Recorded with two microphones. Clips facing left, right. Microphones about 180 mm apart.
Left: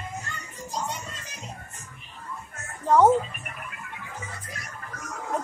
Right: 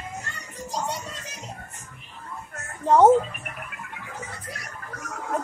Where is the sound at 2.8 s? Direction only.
25° right (ahead or behind).